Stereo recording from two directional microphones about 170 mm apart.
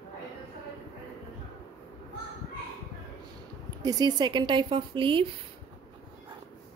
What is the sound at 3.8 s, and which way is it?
Speech, 20° right (ahead or behind).